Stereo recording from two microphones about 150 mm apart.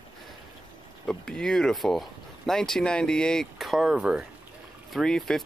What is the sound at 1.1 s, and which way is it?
Speech, 5° left (ahead or behind).